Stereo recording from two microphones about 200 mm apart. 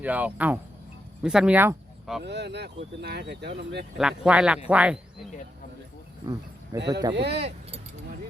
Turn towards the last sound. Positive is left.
turn(degrees=-30)  # may be behind; listen again after turning